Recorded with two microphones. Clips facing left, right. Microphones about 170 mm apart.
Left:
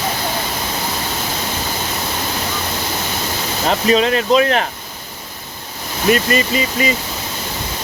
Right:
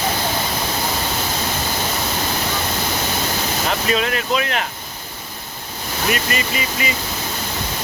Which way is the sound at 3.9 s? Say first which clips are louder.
Left 8 dB; 30° left (ahead or behind).